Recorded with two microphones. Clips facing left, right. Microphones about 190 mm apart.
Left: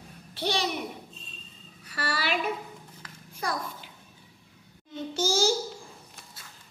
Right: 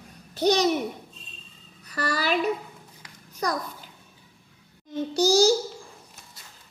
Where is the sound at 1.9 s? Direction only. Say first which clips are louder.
Right 4 dB; 40° right (ahead or behind).